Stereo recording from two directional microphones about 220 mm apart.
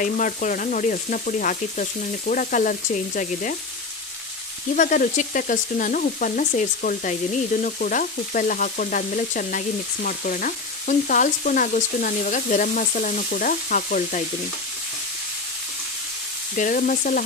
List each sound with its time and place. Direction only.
0.0 s frying: 35° left (ahead or behind)
4.7 s frying: 40° left (ahead or behind)
16.5 s frying: 40° left (ahead or behind)